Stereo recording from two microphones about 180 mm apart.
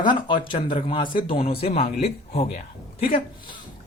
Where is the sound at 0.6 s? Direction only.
40° left (ahead or behind).